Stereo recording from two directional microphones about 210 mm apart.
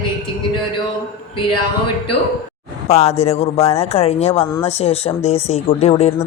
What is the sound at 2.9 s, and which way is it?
A woman's voice, 30° left (ahead or behind).